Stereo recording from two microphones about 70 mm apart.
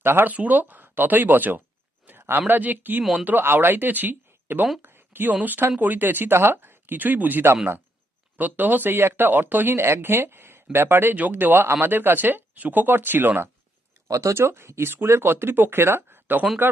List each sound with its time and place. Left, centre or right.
0.0 s speech: right
2.0 s a sound: right
2.5 s a woman's voice: right
14.1 s speech: right